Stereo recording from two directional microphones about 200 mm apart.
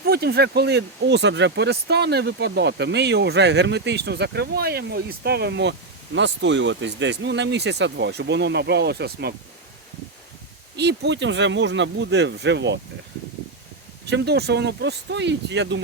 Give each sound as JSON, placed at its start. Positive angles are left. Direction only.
{"t": 0.1, "sound": "speech", "side_deg": -50}
{"t": 10.8, "sound": "speech", "side_deg": -60}
{"t": 14.1, "sound": "speech", "side_deg": -55}